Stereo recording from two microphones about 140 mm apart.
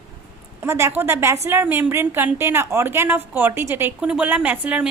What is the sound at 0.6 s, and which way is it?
A woman's voice, 20° right (ahead or behind).